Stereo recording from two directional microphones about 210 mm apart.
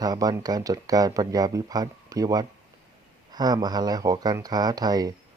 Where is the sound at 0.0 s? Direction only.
20° right (ahead or behind).